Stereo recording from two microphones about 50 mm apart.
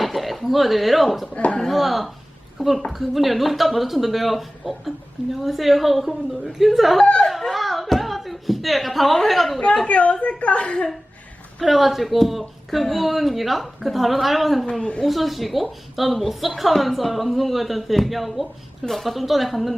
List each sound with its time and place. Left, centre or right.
0.0 s speech: centre
1.3 s a woman's voice: left
1.6 s speech: centre
7.0 s chatter: left
7.3 s a sound: centre
9.8 s a woman's voice: left
11.6 s speech: centre
14.7 s a woman's voice: centre
15.0 s speech: centre